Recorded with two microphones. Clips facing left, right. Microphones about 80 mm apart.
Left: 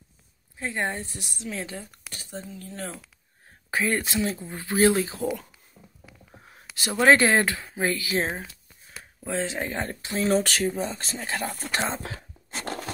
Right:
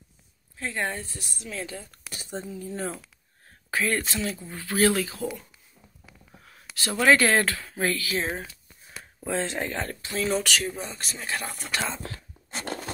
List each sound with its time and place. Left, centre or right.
0.6 s speech: centre
2.0 s a woman's voice: centre
3.7 s speech: centre
5.8 s a sound: left; by 7.1 s centre
7.1 s speech: left
9.2 s speech: centre
9.7 s speech: left
10.2 s speech: left
11.7 s speech: left